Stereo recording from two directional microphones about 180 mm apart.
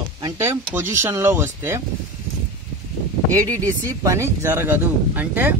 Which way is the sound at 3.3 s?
20° right (ahead or behind).